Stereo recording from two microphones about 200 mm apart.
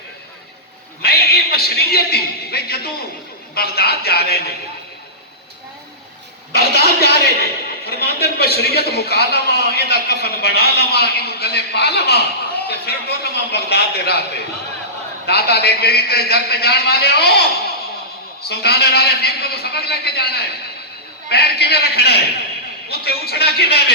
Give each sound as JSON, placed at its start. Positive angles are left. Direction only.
{"t": 1.0, "sound": "a man's voice", "side_deg": 50}
{"t": 6.5, "sound": "a man's voice", "side_deg": 55}
{"t": 18.4, "sound": "a man's voice", "side_deg": 55}